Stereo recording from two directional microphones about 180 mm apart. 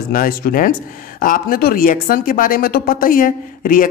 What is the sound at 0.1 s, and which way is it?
Speech, 50° left (ahead or behind).